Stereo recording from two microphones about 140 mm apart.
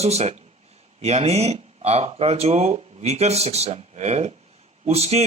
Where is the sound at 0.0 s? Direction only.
50° right (ahead or behind).